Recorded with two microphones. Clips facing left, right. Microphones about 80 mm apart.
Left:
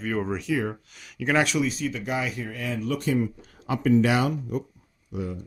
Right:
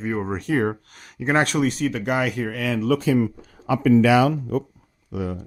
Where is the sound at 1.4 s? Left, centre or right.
Right.